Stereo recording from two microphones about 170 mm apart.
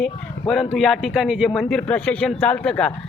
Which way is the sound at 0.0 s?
Centre (ahead or behind).